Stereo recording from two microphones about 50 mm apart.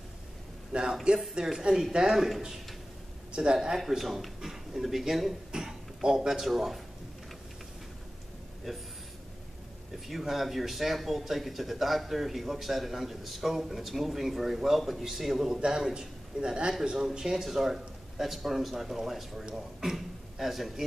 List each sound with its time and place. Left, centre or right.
0.7 s a sound: centre
1.3 s speech: centre
8.7 s speech: centre
10.0 s a man's voice: centre